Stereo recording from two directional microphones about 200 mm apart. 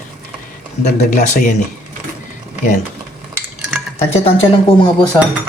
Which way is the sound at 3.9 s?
30° left (ahead or behind).